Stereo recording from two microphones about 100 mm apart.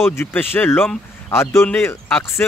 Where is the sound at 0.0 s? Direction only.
25° left (ahead or behind).